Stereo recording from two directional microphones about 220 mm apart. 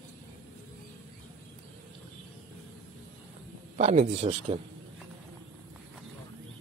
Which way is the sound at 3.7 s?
30° right (ahead or behind).